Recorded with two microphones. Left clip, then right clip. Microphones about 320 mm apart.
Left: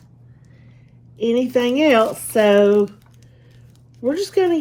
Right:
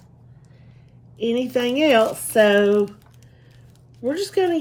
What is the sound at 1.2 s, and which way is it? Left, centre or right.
Speech, centre.